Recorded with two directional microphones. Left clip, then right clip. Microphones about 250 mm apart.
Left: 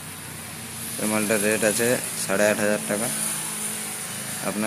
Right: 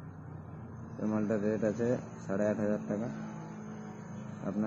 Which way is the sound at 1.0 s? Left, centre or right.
Centre.